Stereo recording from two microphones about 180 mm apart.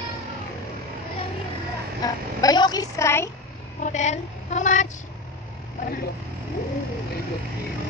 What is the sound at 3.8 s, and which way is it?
Child singing, 40° left (ahead or behind).